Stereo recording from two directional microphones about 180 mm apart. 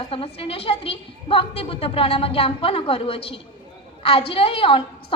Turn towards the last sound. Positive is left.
turn(degrees=30)  # may be behind; listen again after turning